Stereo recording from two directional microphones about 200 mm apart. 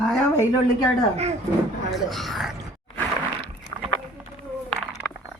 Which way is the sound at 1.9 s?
Centre (ahead or behind).